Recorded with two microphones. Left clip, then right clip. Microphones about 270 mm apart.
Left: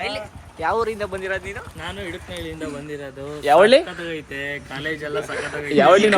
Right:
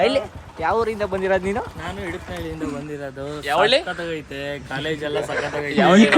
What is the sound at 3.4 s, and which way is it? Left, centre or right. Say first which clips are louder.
Speech: left 5 dB; left.